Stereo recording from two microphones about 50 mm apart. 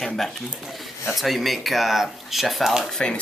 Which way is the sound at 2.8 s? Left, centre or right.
Centre.